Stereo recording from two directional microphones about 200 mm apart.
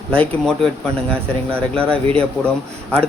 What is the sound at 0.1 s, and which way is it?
Speech, 5° left (ahead or behind).